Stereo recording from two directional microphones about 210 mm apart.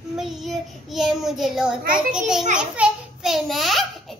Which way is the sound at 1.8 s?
40° right (ahead or behind).